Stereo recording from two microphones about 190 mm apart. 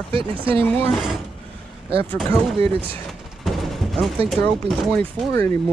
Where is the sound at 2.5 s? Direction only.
30° right (ahead or behind).